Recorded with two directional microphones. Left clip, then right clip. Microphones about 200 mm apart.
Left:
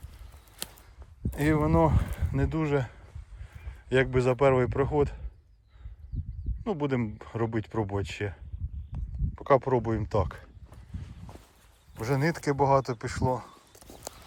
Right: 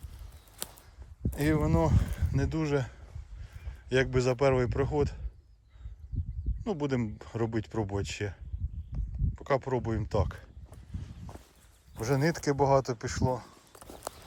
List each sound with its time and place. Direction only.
0.5 s a sound: 15° right (ahead or behind)
1.3 s speech: 10° right (ahead or behind)
6.1 s a sound: 25° right (ahead or behind)
6.6 s speech: 15° right (ahead or behind)
11.9 s speech: 15° right (ahead or behind)
13.8 s clip-clop: 20° right (ahead or behind)